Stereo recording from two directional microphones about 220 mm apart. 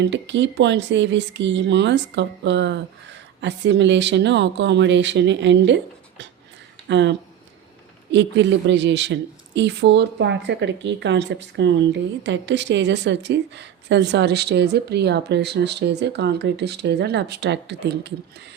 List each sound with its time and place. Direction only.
0.0 s speech: 55° right (ahead or behind)